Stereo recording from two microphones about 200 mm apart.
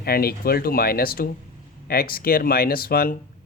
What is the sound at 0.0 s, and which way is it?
Speech, 50° left (ahead or behind).